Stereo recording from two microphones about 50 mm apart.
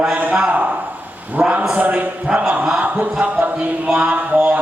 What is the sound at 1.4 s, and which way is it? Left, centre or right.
Speech, centre.